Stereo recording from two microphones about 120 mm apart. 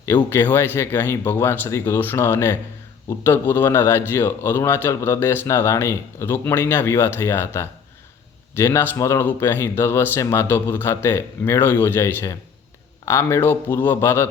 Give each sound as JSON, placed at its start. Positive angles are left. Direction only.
{"t": 0.0, "sound": "a man's voice", "side_deg": 20}